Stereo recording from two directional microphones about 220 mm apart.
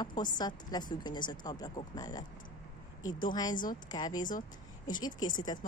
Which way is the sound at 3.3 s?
20° left (ahead or behind).